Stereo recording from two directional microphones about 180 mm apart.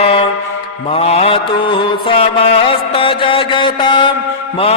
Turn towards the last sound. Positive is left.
turn(degrees=25)  # may be behind; listen again after turning